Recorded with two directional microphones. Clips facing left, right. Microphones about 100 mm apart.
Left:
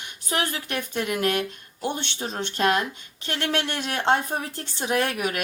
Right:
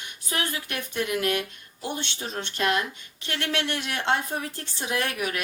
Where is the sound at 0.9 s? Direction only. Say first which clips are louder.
Left 1 dB; 45° left (ahead or behind).